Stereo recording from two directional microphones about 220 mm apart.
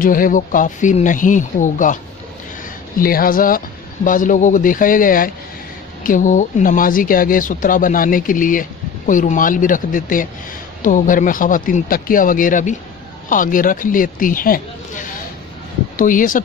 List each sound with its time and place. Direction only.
0.0 s speech: 40° left (ahead or behind)
3.0 s speech: 40° left (ahead or behind)